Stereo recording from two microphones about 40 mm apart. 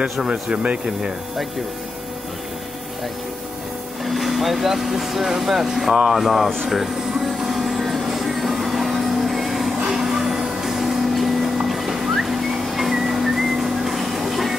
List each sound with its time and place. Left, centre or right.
0.2 s a man's voice: right
4.0 s speech: centre
6.7 s air conditioning: centre
9.8 s train: centre
11.5 s whistling: centre